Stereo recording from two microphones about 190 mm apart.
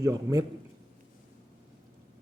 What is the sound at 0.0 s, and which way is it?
Speech, 15° right (ahead or behind).